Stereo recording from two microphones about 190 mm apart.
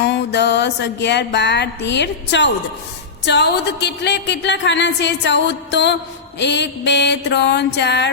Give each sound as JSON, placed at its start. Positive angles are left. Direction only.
{"t": 0.0, "sound": "music", "side_deg": 65}
{"t": 3.2, "sound": "a woman's voice", "side_deg": 65}
{"t": 6.4, "sound": "music", "side_deg": 65}